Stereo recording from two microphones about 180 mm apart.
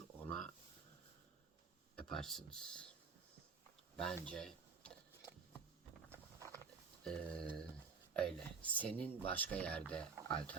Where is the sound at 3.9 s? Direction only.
5° left (ahead or behind).